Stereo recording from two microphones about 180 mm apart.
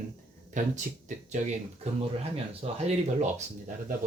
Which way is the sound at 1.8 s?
35° right (ahead or behind).